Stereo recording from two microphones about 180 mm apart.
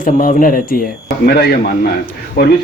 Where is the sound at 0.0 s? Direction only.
50° left (ahead or behind).